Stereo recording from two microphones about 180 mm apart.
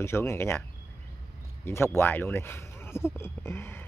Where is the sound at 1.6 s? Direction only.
15° left (ahead or behind).